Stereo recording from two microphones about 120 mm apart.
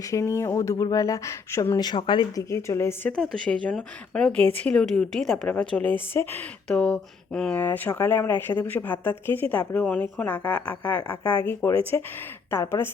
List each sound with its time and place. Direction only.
0.0 s speech: 25° left (ahead or behind)
1.8 s speech: 40° left (ahead or behind)
2.3 s speech: 25° left (ahead or behind)
3.1 s a woman's voice: 10° left (ahead or behind)